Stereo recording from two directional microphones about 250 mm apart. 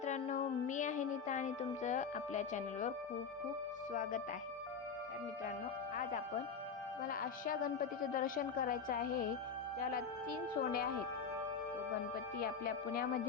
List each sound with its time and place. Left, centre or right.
0.0 s music: left
3.9 s a woman's voice: left
6.0 s a woman's voice: left
10.6 s a woman's voice: left
12.4 s a woman's voice: left